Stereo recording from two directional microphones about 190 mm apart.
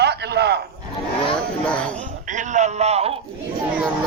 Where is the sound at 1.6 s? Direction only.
5° left (ahead or behind).